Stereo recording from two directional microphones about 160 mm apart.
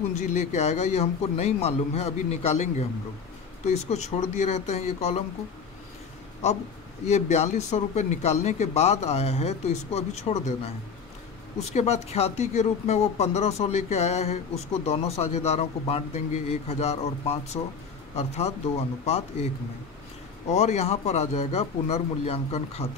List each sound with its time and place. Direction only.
0.2 s speech: 45° left (ahead or behind)
7.1 s speech: 45° left (ahead or behind)
11.7 s speech: 40° left (ahead or behind)